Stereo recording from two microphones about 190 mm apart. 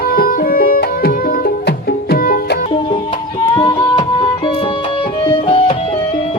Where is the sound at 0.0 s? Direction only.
50° left (ahead or behind).